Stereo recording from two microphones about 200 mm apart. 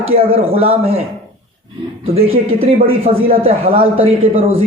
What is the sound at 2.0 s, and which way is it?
A man's voice, 30° right (ahead or behind).